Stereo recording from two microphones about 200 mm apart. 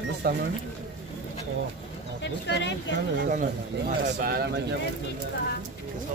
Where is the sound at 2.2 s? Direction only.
60° left (ahead or behind).